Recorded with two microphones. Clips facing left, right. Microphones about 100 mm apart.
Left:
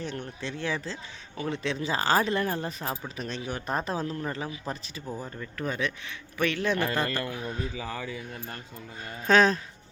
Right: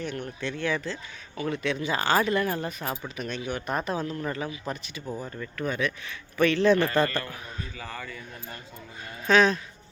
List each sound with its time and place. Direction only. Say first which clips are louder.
0.4 s speech: right 3 dB; 25° left (ahead or behind)
5.0 s a man's voice: right 2 dB; 5° left (ahead or behind)
5.5 s speech: right 2 dB; 30° left (ahead or behind)
6.3 s a man's voice: right 6 dB; 10° left (ahead or behind)
9.2 s speech: even; 40° left (ahead or behind)